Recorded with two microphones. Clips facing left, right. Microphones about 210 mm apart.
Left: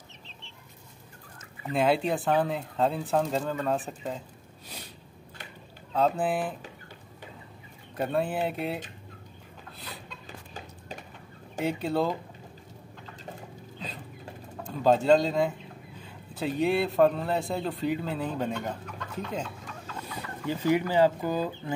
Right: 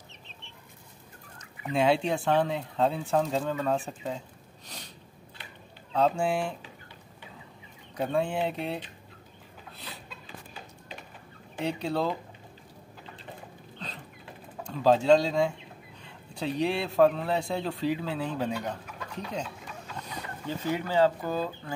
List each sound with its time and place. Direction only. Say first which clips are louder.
1.7 s a man's voice: even; centre (ahead or behind)
4.6 s a sound: left 2 dB; 5° left (ahead or behind)
5.9 s a man's voice: even; centre (ahead or behind)
7.9 s a man's voice: even; 5° left (ahead or behind)
9.8 s a sound: left 1 dB; centre (ahead or behind)
10.5 s a sound: left 3 dB; 45° left (ahead or behind)
11.6 s a man's voice: left 2 dB; centre (ahead or behind)
14.7 s a man's voice: even; centre (ahead or behind)
20.4 s speech: left 5 dB; 10° left (ahead or behind)